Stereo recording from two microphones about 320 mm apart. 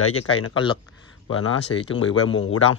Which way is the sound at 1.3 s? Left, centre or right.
Left.